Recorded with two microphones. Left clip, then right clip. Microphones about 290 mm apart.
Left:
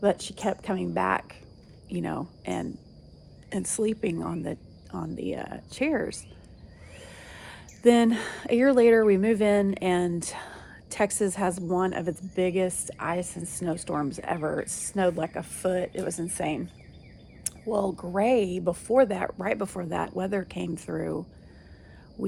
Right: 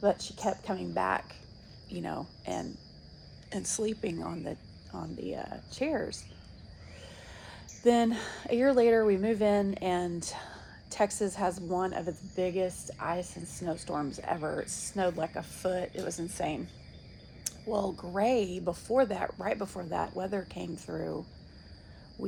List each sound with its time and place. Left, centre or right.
0.0 s speech: left
17.4 s a sound: left
18.2 s speech: left